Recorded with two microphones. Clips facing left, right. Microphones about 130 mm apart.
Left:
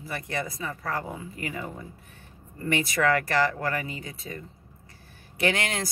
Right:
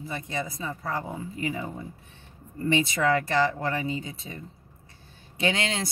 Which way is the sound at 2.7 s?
25° right (ahead or behind).